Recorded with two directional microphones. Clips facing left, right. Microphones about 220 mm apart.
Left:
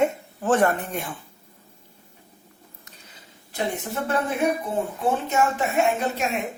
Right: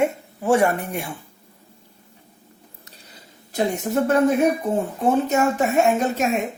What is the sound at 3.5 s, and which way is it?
Speech, 40° right (ahead or behind).